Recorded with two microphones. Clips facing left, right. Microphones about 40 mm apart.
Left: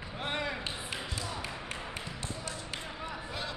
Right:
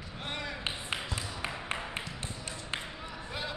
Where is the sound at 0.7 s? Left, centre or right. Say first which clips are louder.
Right 2 dB; right.